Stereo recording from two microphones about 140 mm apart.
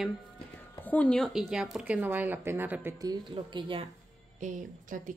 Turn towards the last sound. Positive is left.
turn(degrees=-65)  # may be behind; listen again after turning